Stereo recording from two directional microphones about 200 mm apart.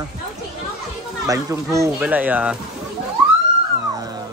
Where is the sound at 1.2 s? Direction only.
15° right (ahead or behind).